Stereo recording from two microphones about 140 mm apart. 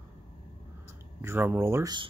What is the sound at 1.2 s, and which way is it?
Speech, 15° right (ahead or behind).